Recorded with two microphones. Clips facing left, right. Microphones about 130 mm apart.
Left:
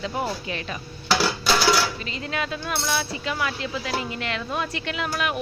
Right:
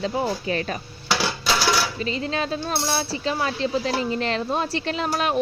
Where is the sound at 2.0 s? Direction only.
30° right (ahead or behind).